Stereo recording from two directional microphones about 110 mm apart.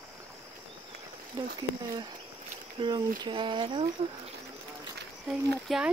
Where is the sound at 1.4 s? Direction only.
35° right (ahead or behind).